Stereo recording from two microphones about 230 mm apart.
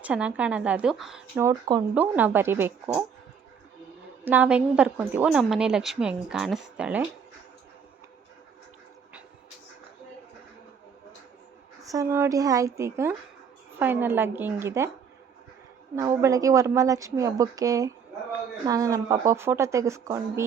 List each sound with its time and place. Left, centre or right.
0.0 s a woman's voice: centre
1.4 s a woman's voice: centre
4.3 s a woman's voice: centre
11.9 s a woman's voice: centre
16.0 s a woman's voice: centre